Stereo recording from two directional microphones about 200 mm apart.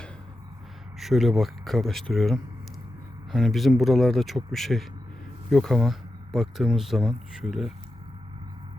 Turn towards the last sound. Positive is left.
turn(degrees=0)  # may be behind; listen again after turning